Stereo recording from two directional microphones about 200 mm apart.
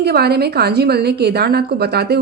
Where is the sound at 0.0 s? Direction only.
55° right (ahead or behind).